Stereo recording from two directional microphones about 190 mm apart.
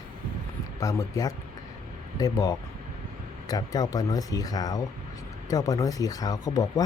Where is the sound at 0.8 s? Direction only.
15° left (ahead or behind).